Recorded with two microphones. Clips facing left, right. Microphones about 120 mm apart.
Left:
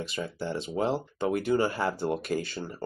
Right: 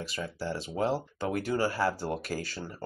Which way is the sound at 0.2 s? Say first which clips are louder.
Left 1 dB; 25° left (ahead or behind).